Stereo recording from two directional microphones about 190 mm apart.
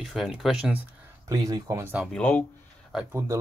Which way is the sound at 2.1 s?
10° left (ahead or behind).